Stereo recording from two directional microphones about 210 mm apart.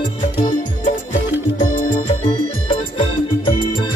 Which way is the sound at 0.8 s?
40° left (ahead or behind).